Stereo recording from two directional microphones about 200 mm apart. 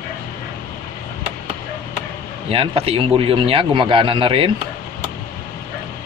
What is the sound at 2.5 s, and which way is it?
A man's voice, 30° right (ahead or behind).